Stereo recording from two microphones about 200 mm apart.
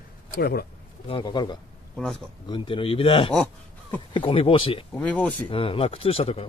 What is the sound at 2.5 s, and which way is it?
Speech, 25° left (ahead or behind).